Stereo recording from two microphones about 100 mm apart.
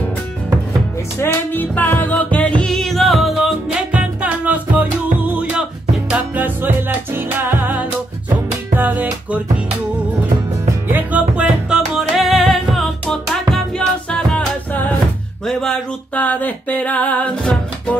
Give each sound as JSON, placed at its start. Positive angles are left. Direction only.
{"t": 1.2, "sound": "music", "side_deg": 20}
{"t": 2.6, "sound": "music", "side_deg": 5}
{"t": 3.9, "sound": "music", "side_deg": -15}
{"t": 10.9, "sound": "music", "side_deg": -15}
{"t": 15.4, "sound": "a sound", "side_deg": 5}